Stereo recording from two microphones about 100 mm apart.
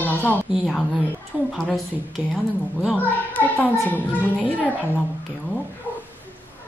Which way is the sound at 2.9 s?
15° left (ahead or behind).